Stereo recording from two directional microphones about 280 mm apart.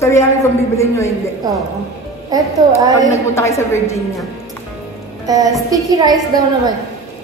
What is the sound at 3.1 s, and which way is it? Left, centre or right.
Speech, centre.